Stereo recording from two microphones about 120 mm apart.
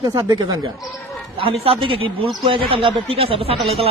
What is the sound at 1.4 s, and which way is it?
A man's voice, 50° right (ahead or behind).